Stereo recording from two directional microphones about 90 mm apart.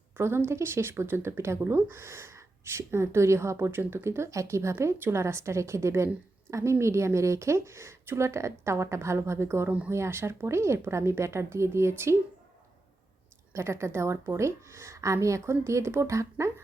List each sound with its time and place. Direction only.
0.2 s a woman's voice: 25° right (ahead or behind)
13.5 s a woman's voice: 30° right (ahead or behind)